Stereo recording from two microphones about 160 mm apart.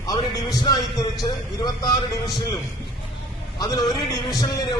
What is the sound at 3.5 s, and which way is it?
Speech, 25° left (ahead or behind).